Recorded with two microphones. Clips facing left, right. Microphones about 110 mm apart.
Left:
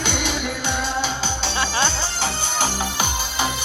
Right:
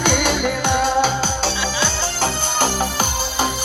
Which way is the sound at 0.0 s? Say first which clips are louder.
Right 6 dB; 50° right (ahead or behind).